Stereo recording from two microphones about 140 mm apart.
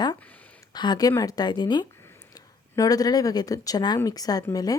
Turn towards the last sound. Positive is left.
turn(degrees=25)  # may be behind; listen again after turning